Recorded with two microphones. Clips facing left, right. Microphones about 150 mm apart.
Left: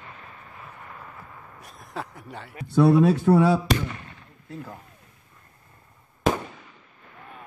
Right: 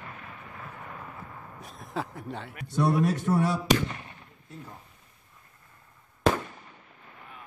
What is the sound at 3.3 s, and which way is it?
Speech, 80° left.